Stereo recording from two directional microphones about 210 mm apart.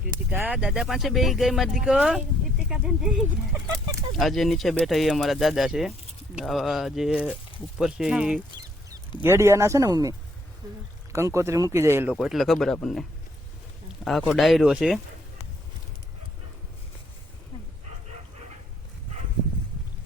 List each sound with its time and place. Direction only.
0.3 s speech: 10° right (ahead or behind)
12.1 s speech: centre (ahead or behind)